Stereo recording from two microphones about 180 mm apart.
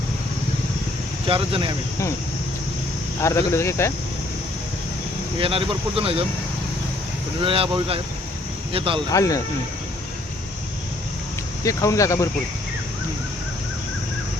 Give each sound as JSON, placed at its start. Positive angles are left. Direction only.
{"t": 1.3, "sound": "speech", "side_deg": -30}
{"t": 3.2, "sound": "speech", "side_deg": 15}
{"t": 5.4, "sound": "speech", "side_deg": -30}
{"t": 7.4, "sound": "speech", "side_deg": -30}
{"t": 9.1, "sound": "speech", "side_deg": 20}
{"t": 11.6, "sound": "speech", "side_deg": 15}